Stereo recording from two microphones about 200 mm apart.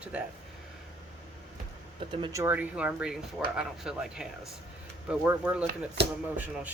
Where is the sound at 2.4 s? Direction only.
10° right (ahead or behind).